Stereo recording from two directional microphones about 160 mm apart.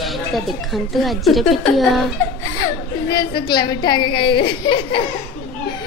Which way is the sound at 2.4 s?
25° left (ahead or behind).